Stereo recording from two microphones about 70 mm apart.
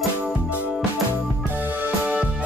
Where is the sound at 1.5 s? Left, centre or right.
Right.